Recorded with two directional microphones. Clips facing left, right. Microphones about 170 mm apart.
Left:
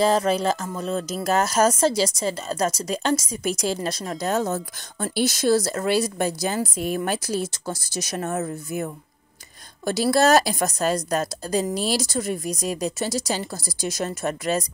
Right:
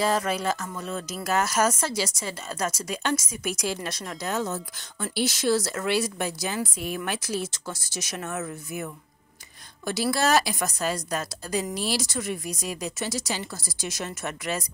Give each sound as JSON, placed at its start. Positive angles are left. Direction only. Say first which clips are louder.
{"t": 0.0, "sound": "speech", "louder": "left 5 dB", "side_deg": 30}